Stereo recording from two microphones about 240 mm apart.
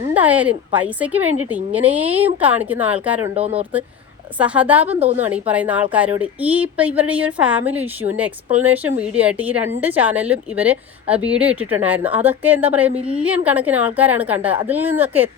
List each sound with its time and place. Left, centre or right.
0.1 s speech: centre
3.3 s speech: right
4.4 s speech: centre
4.9 s speech: right
5.2 s speech: centre